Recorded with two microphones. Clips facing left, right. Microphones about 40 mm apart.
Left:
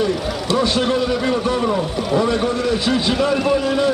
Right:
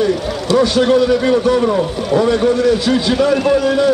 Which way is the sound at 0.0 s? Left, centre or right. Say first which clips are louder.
Right 4 dB; centre.